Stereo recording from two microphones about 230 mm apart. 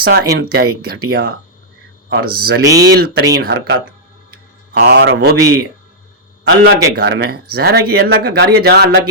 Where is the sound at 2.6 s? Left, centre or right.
Centre.